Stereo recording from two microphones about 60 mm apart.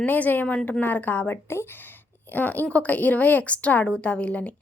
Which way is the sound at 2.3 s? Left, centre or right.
Left.